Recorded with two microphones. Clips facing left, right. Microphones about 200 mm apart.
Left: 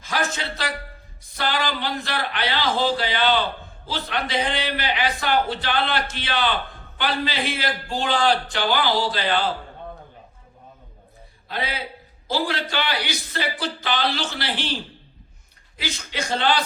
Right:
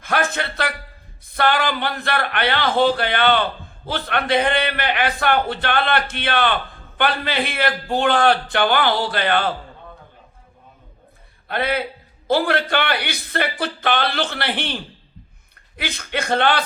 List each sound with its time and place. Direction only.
0.0 s a man's voice: 60° right (ahead or behind)
11.4 s a man's voice: 60° right (ahead or behind)
15.8 s speech: 60° right (ahead or behind)